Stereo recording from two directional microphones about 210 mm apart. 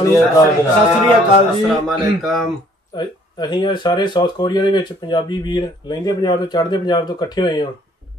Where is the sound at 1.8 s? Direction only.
Centre (ahead or behind).